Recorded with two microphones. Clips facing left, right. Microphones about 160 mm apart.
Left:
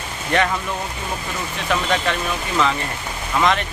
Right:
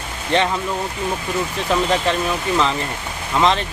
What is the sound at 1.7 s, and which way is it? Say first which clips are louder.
Speech: right 2 dB; 30° right (ahead or behind).